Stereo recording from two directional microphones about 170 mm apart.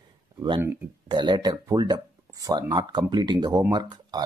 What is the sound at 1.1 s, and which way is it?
Speech, 25° right (ahead or behind).